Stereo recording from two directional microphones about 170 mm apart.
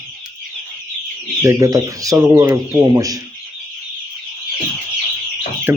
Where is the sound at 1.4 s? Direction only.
20° right (ahead or behind).